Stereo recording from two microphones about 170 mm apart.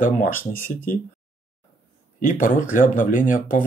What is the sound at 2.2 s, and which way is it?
Speech, 55° left (ahead or behind).